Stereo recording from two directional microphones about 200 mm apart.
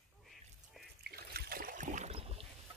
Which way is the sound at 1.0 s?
50° right (ahead or behind).